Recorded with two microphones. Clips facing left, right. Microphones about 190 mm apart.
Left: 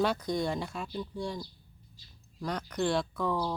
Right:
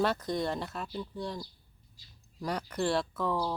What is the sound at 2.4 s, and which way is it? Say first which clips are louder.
Speech: even; 5° right (ahead or behind).